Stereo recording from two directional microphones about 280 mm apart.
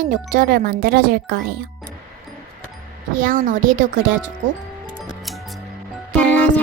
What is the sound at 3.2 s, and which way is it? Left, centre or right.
Speech, right.